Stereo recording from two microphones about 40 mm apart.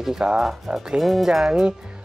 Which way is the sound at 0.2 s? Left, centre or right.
Right.